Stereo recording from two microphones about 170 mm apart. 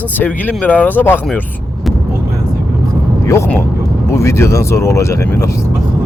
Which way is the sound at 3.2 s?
15° left (ahead or behind).